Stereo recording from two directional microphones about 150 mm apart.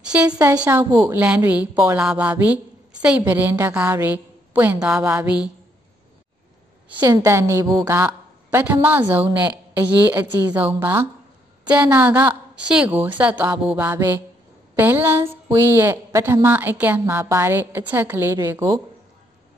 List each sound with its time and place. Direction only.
0.0 s a sound: 5° right (ahead or behind)
0.4 s a woman's voice: 15° right (ahead or behind)
6.9 s a woman's voice: 30° right (ahead or behind)
7.2 s a woman's voice: 20° right (ahead or behind)